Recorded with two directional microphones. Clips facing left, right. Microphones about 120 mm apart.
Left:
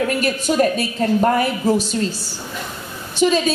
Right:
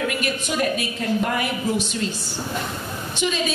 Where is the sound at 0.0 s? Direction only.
35° left (ahead or behind).